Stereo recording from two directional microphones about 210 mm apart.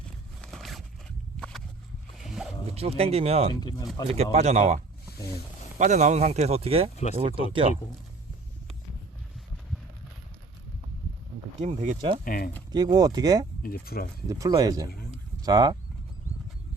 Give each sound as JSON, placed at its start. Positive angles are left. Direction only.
{"t": 0.4, "sound": "a sound", "side_deg": 0}
{"t": 2.1, "sound": "zipper", "side_deg": 0}
{"t": 2.7, "sound": "speech", "side_deg": -30}
{"t": 3.5, "sound": "speech", "side_deg": 20}
{"t": 4.1, "sound": "speech", "side_deg": -30}
{"t": 5.8, "sound": "speech", "side_deg": -35}
{"t": 6.9, "sound": "speech", "side_deg": 30}
{"t": 7.2, "sound": "speech", "side_deg": -25}
{"t": 11.6, "sound": "speech", "side_deg": -30}
{"t": 12.2, "sound": "speech", "side_deg": 45}
{"t": 12.7, "sound": "speech", "side_deg": -20}
{"t": 13.6, "sound": "speech", "side_deg": 45}
{"t": 14.3, "sound": "speech", "side_deg": -15}